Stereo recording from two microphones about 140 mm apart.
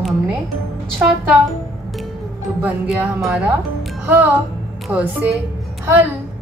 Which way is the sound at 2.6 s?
5° right (ahead or behind).